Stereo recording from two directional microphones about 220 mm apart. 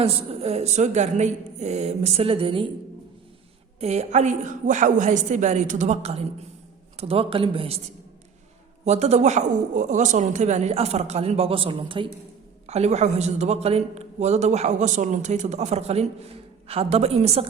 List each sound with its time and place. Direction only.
0.0 s speech: 25° right (ahead or behind)
3.8 s a man's voice: 30° right (ahead or behind)
8.8 s a man's voice: 30° right (ahead or behind)